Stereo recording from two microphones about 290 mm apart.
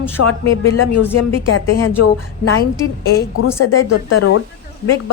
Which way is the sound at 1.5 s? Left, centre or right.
Left.